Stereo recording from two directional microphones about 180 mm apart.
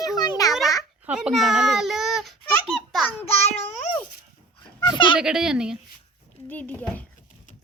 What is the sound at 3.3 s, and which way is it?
Child singing, 35° left (ahead or behind).